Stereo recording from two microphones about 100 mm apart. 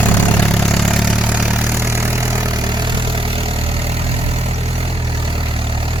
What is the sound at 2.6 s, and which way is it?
Vehicle, 45° right (ahead or behind).